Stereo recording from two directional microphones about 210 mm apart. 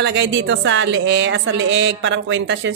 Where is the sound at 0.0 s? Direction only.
60° right (ahead or behind).